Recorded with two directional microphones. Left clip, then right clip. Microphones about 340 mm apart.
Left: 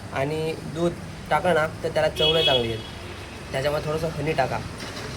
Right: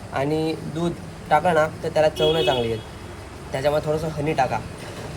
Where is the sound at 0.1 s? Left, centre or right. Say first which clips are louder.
Right 3 dB; centre.